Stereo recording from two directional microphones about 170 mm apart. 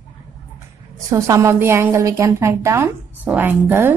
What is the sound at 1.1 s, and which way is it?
A woman's voice, 15° right (ahead or behind).